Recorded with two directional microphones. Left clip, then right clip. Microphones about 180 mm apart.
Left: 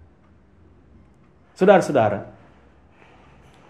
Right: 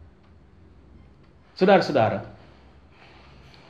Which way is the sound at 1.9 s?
45° left (ahead or behind).